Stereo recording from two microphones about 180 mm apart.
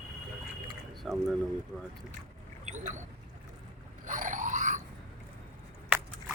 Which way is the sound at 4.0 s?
45° right (ahead or behind).